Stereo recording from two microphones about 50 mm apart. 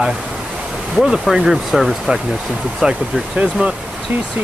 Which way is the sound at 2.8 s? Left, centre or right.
Right.